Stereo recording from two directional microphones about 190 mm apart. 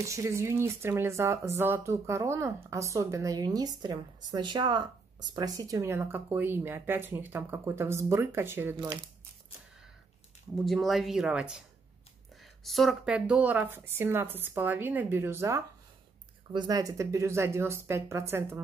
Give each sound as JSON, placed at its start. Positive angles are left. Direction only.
{"t": 0.0, "sound": "speech", "side_deg": -15}
{"t": 10.5, "sound": "speech", "side_deg": 0}
{"t": 12.6, "sound": "speech", "side_deg": 0}